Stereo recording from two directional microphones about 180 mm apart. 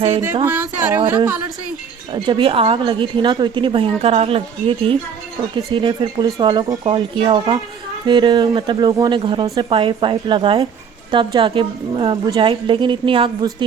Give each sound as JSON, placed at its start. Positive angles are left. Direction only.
{"t": 0.4, "sound": "speech", "side_deg": -10}
{"t": 2.1, "sound": "a woman's voice", "side_deg": -30}